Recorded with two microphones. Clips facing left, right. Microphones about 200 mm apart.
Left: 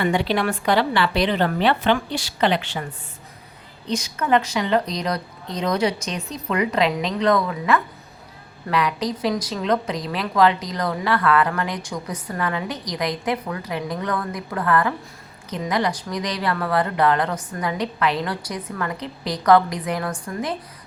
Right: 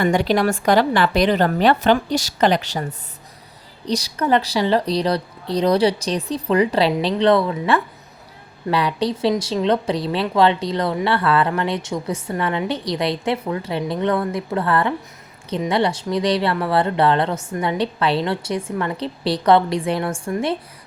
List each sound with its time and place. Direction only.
0.0 s a woman's voice: 45° right (ahead or behind); by 20.6 s 25° right (ahead or behind)